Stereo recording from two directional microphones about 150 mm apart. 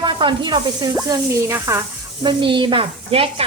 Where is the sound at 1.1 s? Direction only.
15° right (ahead or behind).